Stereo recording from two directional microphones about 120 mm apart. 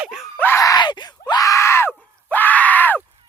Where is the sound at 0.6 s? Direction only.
35° left (ahead or behind).